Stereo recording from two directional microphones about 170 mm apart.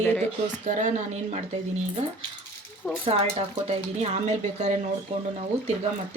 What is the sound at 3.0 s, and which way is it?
Speech, 35° right (ahead or behind).